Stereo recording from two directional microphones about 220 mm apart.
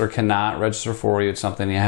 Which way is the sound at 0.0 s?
15° left (ahead or behind).